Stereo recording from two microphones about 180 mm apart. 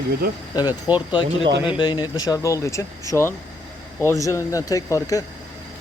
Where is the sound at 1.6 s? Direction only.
25° left (ahead or behind).